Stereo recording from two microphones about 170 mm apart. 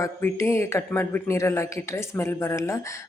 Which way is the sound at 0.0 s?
15° left (ahead or behind).